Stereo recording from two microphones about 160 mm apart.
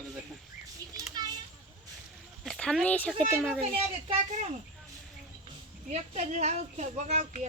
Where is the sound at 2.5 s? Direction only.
5° left (ahead or behind).